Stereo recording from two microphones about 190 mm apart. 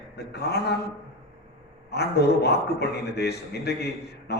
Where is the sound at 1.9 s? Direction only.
60° left (ahead or behind).